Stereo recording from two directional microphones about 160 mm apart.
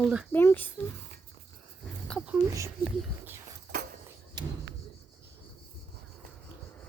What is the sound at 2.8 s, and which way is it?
Speech, 15° right (ahead or behind).